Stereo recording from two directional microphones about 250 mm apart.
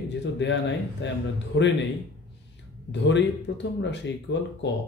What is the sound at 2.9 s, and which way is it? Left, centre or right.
Speech, left.